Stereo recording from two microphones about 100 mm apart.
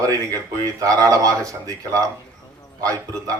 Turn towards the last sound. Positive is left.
turn(degrees=-35)  # may be behind; listen again after turning